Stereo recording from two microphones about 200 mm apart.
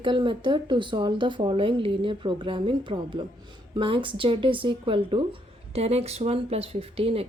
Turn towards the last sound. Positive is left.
turn(degrees=-30)  # may be behind; listen again after turning